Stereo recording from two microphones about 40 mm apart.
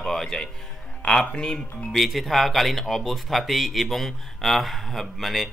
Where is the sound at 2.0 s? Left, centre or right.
Centre.